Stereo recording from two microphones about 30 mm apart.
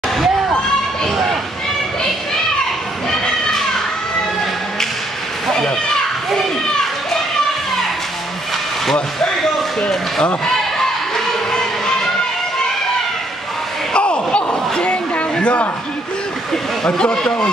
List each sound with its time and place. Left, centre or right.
9.8 s basketball bounce: left
13.9 s a sound: left
16.8 s a man's voice: left